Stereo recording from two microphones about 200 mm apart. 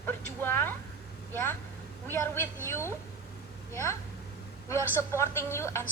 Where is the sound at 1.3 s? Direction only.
10° left (ahead or behind).